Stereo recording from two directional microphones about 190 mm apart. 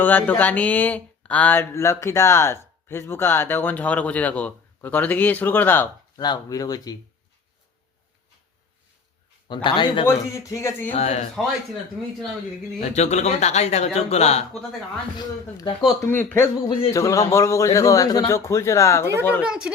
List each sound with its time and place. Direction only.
0.0 s speech: 10° left (ahead or behind)
9.5 s speech: 25° left (ahead or behind)
10.1 s speech: 15° left (ahead or behind)
10.9 s speech: 35° left (ahead or behind)
12.0 s a woman's voice: centre (ahead or behind)
12.8 s speech: 35° left (ahead or behind)
16.0 s speech: 10° left (ahead or behind)
19.4 s a woman's voice: 5° right (ahead or behind)